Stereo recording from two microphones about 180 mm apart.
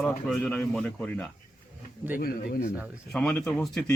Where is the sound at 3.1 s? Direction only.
5° left (ahead or behind).